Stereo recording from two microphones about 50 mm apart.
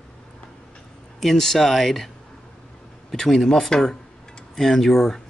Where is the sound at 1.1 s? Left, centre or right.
Centre.